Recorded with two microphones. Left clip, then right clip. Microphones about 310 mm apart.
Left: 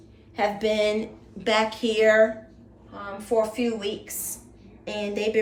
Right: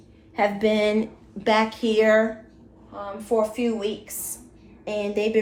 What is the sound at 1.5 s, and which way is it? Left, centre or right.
A woman's voice, centre.